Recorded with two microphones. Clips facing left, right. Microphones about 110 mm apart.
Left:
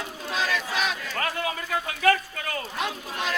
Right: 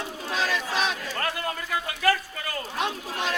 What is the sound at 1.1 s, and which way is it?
A man's voice, centre (ahead or behind).